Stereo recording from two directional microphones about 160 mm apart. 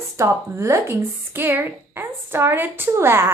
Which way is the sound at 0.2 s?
15° right (ahead or behind).